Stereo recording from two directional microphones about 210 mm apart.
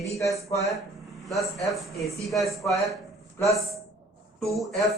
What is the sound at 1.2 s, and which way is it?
A man's voice, centre (ahead or behind).